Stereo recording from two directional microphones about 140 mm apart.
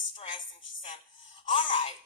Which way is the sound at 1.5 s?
40° left (ahead or behind).